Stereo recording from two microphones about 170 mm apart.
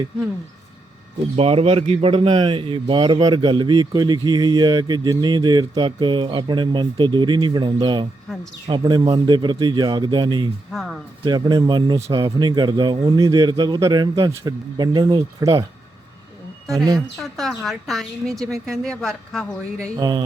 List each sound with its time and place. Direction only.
1.4 s a man's voice: 35° right (ahead or behind)
10.7 s speech: centre (ahead or behind)
11.3 s a man's voice: 25° right (ahead or behind)
17.2 s speech: centre (ahead or behind)
20.0 s a man's voice: 25° right (ahead or behind)